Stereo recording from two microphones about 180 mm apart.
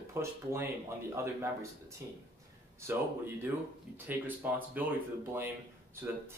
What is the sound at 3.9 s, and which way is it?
Speech, 10° right (ahead or behind).